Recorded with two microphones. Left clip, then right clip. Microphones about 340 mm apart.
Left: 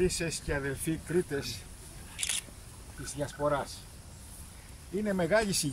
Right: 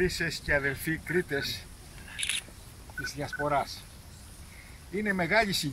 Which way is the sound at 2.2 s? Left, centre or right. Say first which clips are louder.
Right 3 dB; centre.